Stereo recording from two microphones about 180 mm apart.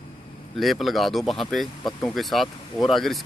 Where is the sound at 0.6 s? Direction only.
Centre (ahead or behind).